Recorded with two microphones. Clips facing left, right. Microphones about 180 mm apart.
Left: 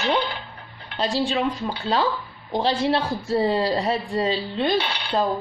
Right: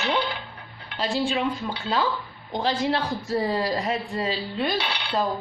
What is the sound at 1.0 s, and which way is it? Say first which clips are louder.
A man's voice: left 2 dB; 35° left (ahead or behind).